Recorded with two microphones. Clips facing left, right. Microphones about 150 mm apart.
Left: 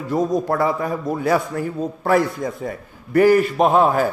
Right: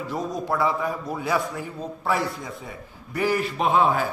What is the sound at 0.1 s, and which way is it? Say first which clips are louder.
A man's voice: left 9 dB; 50° left (ahead or behind).